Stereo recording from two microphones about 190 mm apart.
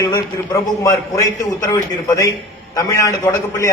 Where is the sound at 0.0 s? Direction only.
15° left (ahead or behind).